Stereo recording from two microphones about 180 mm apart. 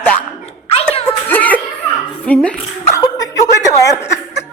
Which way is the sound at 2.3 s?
10° left (ahead or behind).